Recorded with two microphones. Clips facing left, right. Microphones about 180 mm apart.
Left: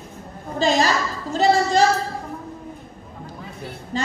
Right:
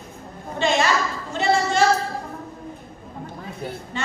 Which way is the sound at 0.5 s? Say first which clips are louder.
Left 1 dB; 35° left (ahead or behind).